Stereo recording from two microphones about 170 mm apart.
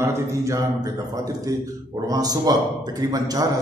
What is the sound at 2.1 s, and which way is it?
A man's voice, 20° right (ahead or behind).